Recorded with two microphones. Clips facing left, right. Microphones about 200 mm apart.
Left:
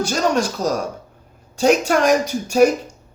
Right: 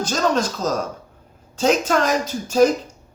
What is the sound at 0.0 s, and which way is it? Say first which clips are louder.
Speech: left 1 dB; 10° left (ahead or behind).